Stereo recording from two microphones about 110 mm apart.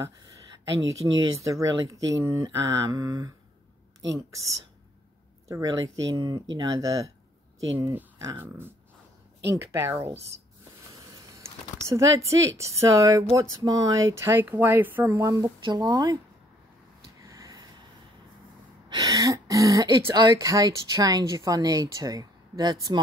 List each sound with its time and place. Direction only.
0.7 s speech: 30° right (ahead or behind)
5.5 s speech: 30° right (ahead or behind)
8.4 s speech: 20° right (ahead or behind)
11.9 s speech: 30° right (ahead or behind)
17.2 s a sound: 30° right (ahead or behind)
18.9 s throat clearing: 35° right (ahead or behind)
20.2 s speech: 35° right (ahead or behind)